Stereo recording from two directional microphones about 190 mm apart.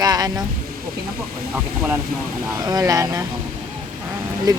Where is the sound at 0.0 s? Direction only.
20° right (ahead or behind).